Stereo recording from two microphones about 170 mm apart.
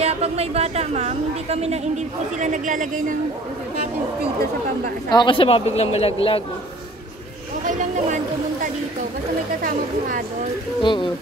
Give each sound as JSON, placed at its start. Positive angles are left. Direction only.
{"t": 0.0, "sound": "a woman's voice", "side_deg": -35}
{"t": 5.1, "sound": "a man's voice", "side_deg": 30}
{"t": 7.6, "sound": "a sound", "side_deg": -50}
{"t": 10.8, "sound": "speech", "side_deg": 30}